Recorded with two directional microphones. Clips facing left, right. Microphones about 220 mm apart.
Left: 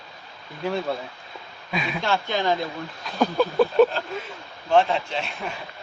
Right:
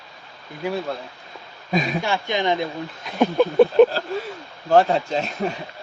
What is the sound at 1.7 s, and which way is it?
Speech, 40° right (ahead or behind).